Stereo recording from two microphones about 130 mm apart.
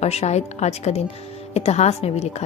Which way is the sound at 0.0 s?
55° left (ahead or behind).